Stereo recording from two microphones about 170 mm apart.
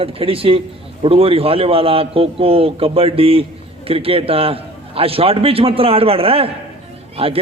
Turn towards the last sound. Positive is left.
turn(degrees=-35)  # may be behind; listen again after turning